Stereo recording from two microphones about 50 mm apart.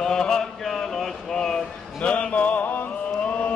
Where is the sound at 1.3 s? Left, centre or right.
Centre.